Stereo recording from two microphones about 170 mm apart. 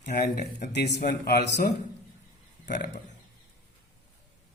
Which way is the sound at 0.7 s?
75° left (ahead or behind).